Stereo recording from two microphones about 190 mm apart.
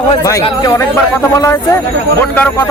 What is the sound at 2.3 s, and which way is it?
Speech, 10° left (ahead or behind).